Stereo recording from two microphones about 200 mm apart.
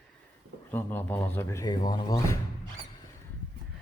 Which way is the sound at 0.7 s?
10° left (ahead or behind).